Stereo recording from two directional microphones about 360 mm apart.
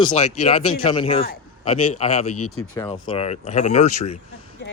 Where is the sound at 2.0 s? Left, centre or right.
Centre.